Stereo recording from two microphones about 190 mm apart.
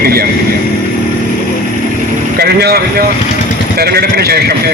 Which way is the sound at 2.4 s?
55° right (ahead or behind).